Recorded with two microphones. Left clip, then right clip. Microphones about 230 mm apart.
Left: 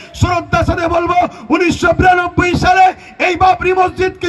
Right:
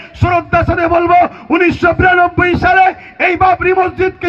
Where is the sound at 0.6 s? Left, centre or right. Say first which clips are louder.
Right 2 dB; left.